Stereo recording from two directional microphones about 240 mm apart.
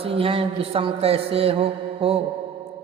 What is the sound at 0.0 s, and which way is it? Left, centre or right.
Speech, right.